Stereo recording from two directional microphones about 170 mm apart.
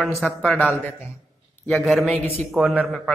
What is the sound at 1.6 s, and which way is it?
Speech, centre (ahead or behind).